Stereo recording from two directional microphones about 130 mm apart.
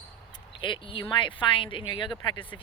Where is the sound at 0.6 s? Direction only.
40° left (ahead or behind).